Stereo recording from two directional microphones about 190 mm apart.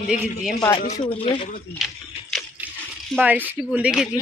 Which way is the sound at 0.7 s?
30° left (ahead or behind).